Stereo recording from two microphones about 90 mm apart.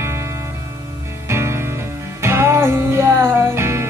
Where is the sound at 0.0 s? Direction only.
30° right (ahead or behind).